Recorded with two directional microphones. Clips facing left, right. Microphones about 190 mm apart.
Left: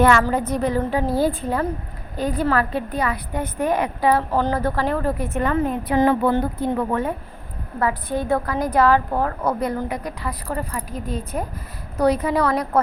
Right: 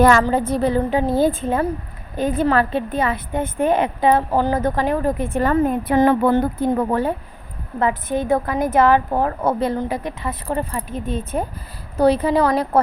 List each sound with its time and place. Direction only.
0.0 s a woman's voice: 40° right (ahead or behind)
5.4 s a woman's voice: 45° right (ahead or behind)
6.7 s speech: 35° right (ahead or behind)
7.8 s a woman's voice: 20° right (ahead or behind)